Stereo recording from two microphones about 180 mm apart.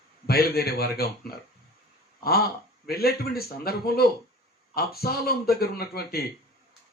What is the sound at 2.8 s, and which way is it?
Speech, 60° left (ahead or behind).